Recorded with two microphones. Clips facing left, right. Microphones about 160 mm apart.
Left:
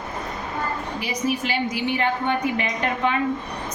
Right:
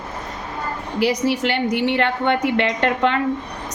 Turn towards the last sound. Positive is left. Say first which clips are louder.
# right 4 dB
turn(degrees=-70)  # may be behind; listen again after turning